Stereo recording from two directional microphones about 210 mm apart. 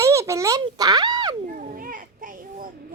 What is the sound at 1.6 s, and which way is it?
Children playing, 40° right (ahead or behind).